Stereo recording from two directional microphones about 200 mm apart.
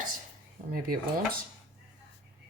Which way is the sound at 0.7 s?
45° right (ahead or behind).